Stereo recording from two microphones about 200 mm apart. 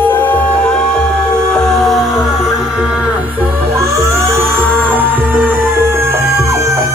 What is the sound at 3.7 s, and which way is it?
Music, 15° right (ahead or behind).